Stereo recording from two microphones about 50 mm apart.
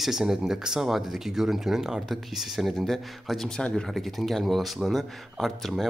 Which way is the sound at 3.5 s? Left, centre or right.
Centre.